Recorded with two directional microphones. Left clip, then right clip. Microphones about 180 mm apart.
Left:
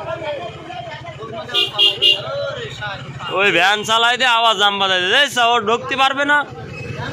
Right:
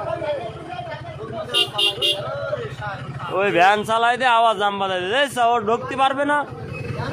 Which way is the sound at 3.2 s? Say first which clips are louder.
Left 2 dB; centre (ahead or behind).